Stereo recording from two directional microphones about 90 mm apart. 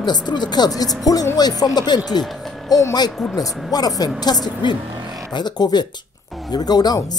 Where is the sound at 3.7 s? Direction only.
45° left (ahead or behind).